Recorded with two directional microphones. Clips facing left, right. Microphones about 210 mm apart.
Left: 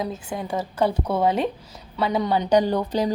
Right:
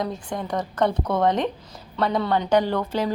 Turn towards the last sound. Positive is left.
turn(degrees=15)  # may be behind; listen again after turning